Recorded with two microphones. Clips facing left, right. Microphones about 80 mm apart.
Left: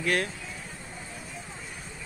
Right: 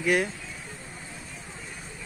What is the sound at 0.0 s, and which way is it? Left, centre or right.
Speech, centre.